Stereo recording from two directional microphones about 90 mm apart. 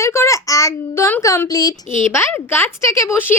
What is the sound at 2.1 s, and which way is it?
A woman's voice, 25° left (ahead or behind).